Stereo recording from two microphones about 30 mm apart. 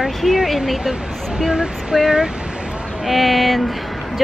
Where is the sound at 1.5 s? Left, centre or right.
Right.